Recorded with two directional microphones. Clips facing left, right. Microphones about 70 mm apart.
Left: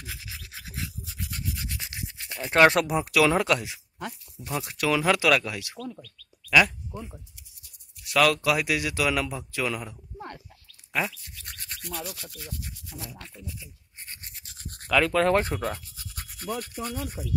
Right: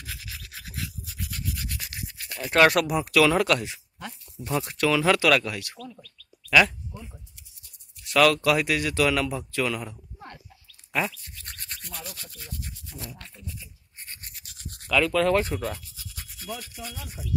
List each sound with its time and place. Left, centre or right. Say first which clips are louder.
0.0 s rub: even; centre
4.4 s speech: right 4 dB; centre
8.0 s speech: right 2 dB; centre
14.2 s a sound: even; left
14.7 s speech: even; left